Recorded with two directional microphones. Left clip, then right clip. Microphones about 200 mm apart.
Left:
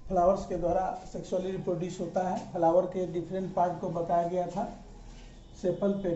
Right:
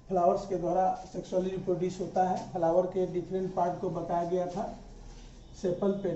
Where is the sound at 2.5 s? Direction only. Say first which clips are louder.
Left 4 dB; 15° left (ahead or behind).